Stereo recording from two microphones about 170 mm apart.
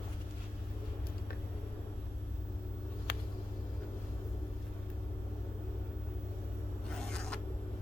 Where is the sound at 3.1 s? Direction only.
80° left.